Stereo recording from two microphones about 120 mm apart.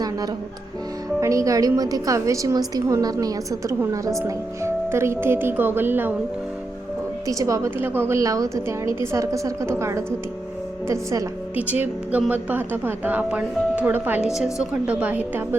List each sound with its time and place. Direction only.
1.2 s a woman's voice: 25° right (ahead or behind)
7.3 s a woman's voice: 30° right (ahead or behind)
11.5 s speech: 15° right (ahead or behind)